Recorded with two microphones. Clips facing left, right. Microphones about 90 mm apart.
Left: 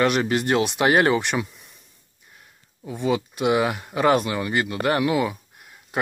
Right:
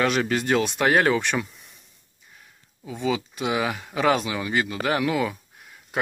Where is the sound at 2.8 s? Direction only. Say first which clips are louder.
Left 2 dB; 5° left (ahead or behind).